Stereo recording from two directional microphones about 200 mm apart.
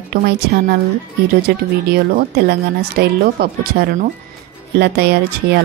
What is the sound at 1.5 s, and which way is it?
A woman's voice, 55° right (ahead or behind).